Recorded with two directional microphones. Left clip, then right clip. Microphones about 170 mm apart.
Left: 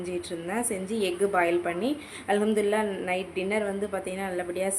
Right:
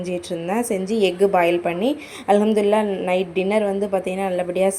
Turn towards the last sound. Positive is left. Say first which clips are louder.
# right 10 dB
turn(degrees=-30)  # may be behind; listen again after turning